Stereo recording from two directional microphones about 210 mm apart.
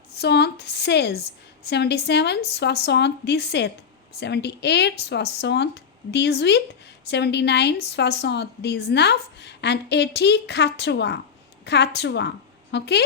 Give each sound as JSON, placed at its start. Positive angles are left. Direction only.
{"t": 0.1, "sound": "a woman's voice", "side_deg": 50}